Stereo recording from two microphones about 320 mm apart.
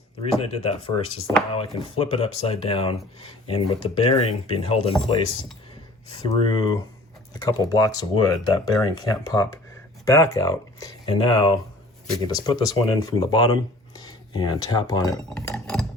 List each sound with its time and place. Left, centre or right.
0.2 s speech: centre
6.2 s speech: centre
15.1 s glass: centre